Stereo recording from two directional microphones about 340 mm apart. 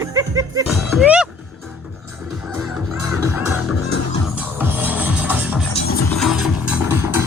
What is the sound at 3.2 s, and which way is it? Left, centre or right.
Music, centre.